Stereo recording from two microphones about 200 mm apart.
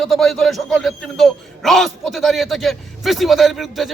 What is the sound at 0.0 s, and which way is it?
A man's voice, centre (ahead or behind).